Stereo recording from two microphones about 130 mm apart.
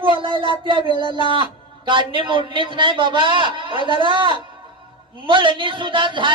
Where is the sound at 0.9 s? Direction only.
35° left (ahead or behind).